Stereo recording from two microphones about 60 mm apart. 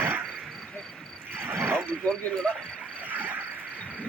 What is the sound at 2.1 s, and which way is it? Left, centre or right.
Speech, centre.